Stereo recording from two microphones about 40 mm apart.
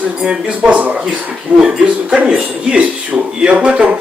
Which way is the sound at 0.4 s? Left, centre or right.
Right.